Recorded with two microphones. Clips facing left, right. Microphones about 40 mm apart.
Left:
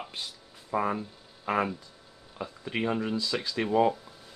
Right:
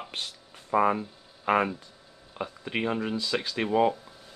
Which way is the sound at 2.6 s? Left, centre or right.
Centre.